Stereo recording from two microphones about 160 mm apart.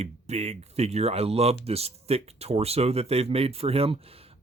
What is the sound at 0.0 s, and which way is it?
Speech, 40° right (ahead or behind).